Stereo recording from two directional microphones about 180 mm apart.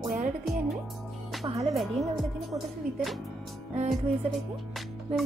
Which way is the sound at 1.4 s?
35° right (ahead or behind).